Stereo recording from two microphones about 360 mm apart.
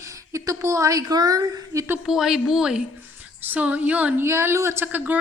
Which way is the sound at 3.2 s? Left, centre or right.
Centre.